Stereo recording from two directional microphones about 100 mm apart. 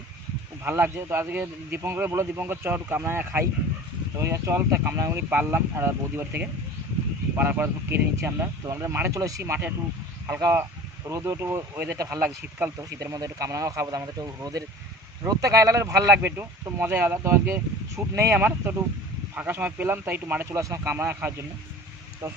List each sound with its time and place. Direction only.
0.6 s speech: 20° right (ahead or behind)
11.1 s speech: 30° right (ahead or behind)
20.9 s speech: 20° right (ahead or behind)